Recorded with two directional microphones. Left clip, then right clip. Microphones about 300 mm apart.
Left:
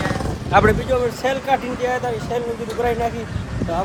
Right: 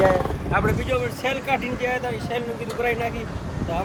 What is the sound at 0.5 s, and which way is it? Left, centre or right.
Speech, centre.